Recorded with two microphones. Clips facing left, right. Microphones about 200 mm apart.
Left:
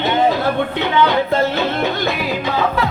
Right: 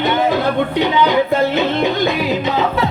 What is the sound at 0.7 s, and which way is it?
Music, 15° right (ahead or behind).